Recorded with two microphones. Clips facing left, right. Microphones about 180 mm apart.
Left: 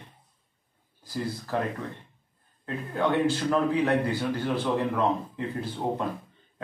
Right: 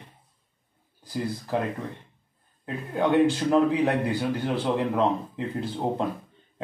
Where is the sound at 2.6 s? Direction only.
15° right (ahead or behind).